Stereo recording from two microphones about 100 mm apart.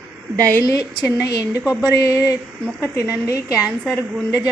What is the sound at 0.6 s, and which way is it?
A woman's voice, 35° left (ahead or behind).